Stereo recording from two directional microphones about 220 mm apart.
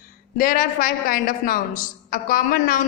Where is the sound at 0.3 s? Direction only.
40° left (ahead or behind).